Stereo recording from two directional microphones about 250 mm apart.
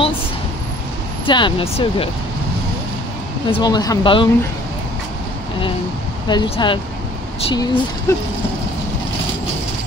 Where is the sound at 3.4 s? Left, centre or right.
Centre.